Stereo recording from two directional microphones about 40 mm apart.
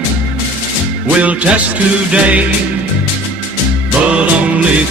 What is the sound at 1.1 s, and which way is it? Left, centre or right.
Music, right.